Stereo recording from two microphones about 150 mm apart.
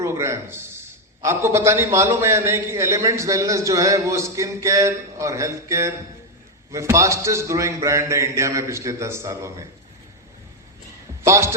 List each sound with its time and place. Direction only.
0.0 s a man's voice: 20° right (ahead or behind)
11.3 s a man's voice: 20° right (ahead or behind)